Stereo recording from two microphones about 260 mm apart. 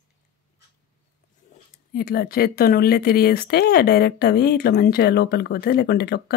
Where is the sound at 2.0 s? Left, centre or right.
Left.